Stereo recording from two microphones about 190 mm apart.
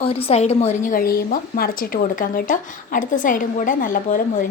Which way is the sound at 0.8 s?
50° left (ahead or behind).